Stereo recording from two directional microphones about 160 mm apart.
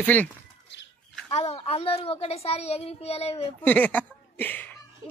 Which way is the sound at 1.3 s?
40° left (ahead or behind).